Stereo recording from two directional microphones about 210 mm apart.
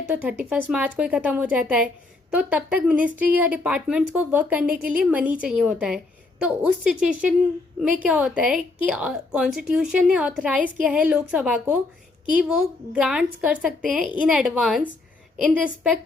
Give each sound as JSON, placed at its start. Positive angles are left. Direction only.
{"t": 0.1, "sound": "a woman's voice", "side_deg": -5}
{"t": 12.9, "sound": "a woman's voice", "side_deg": -5}